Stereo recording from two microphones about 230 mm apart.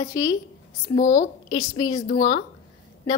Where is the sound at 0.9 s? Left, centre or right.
Left.